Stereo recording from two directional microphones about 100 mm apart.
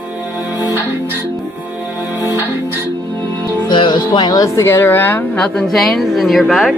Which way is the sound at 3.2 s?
25° left (ahead or behind).